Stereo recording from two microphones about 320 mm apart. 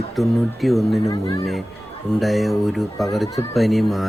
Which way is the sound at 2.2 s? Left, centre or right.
Centre.